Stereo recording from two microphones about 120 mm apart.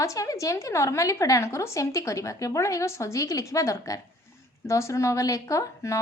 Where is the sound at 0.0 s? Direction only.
25° left (ahead or behind).